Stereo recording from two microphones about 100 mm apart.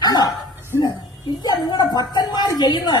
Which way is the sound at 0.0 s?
40° left (ahead or behind).